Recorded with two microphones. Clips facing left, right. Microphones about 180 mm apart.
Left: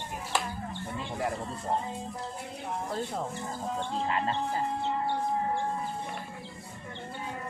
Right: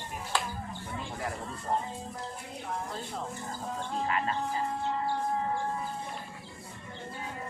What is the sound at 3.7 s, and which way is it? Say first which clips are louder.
Music: even; 30° left (ahead or behind).